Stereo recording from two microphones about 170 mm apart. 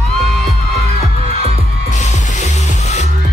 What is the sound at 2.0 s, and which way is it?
Music, 40° left (ahead or behind).